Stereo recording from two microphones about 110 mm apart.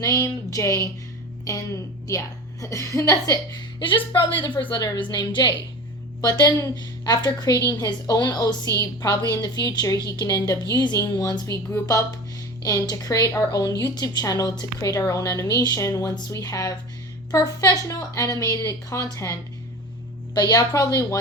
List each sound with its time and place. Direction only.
0.0 s a woman's voice: 25° left (ahead or behind)
3.8 s a woman's voice: 45° left (ahead or behind); by 21.2 s 30° left (ahead or behind)